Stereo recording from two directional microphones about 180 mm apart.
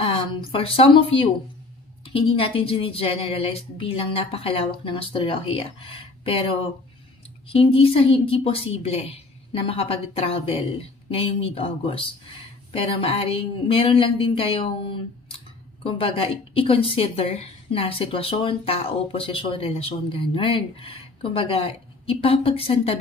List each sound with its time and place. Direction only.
0.5 s a woman's voice: 30° left (ahead or behind)
15.8 s a woman's voice: 30° left (ahead or behind)